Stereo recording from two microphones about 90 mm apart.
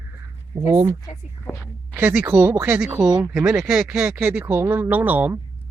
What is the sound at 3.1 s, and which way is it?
Speech, 50° right (ahead or behind).